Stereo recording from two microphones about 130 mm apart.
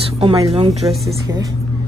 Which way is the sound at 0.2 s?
50° right (ahead or behind).